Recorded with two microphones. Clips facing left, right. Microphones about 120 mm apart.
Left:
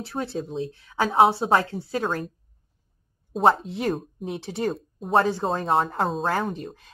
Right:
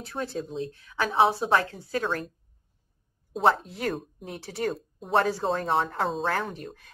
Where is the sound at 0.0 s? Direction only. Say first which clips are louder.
Left 3 dB; 30° left (ahead or behind).